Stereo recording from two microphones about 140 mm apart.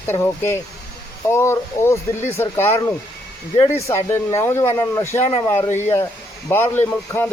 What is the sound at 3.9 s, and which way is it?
Speech, 20° left (ahead or behind).